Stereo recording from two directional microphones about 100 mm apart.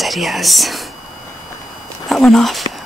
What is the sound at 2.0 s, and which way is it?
Speech, centre (ahead or behind).